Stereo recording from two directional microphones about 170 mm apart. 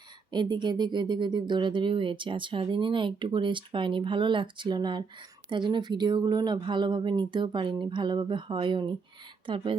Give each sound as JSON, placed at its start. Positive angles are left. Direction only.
{"t": 0.3, "sound": "speech", "side_deg": -25}